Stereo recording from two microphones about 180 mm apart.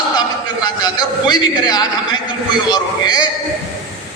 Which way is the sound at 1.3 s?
20° left (ahead or behind).